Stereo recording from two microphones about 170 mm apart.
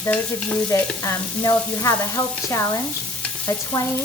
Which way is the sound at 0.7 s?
15° left (ahead or behind).